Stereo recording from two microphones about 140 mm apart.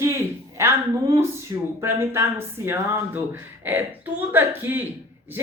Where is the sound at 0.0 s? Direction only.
20° right (ahead or behind).